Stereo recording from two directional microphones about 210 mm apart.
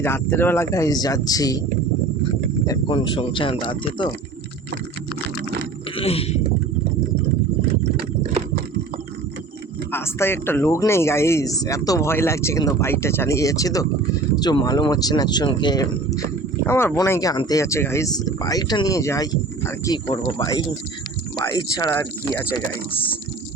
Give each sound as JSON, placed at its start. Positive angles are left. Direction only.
{"t": 0.0, "sound": "speech", "side_deg": 10}
{"t": 2.6, "sound": "speech", "side_deg": 20}
{"t": 6.0, "sound": "stomach rumble", "side_deg": 30}
{"t": 9.9, "sound": "speech", "side_deg": 10}